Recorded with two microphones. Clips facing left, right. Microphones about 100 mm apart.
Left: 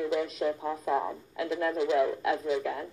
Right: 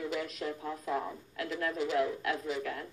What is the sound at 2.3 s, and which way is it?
Speech, 20° left (ahead or behind).